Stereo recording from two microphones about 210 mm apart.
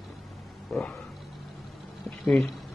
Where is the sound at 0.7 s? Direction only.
Centre (ahead or behind).